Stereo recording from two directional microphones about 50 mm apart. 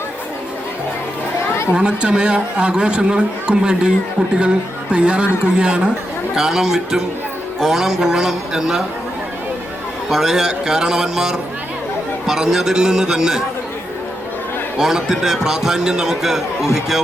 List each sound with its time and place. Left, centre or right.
1.7 s a man's voice: centre
10.1 s a man's voice: centre
14.8 s a man's voice: centre